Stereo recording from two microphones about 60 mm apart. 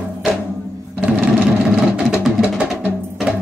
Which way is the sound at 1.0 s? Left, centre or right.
Right.